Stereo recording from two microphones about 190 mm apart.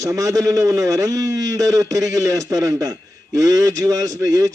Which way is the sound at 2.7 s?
20° right (ahead or behind).